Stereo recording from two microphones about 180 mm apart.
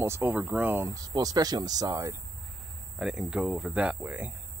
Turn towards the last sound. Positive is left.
turn(degrees=-10)  # may be behind; listen again after turning